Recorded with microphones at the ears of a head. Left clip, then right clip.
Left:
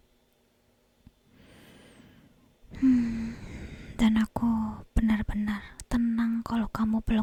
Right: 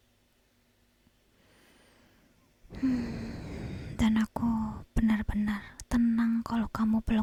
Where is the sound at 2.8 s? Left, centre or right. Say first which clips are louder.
Left 7 dB; left.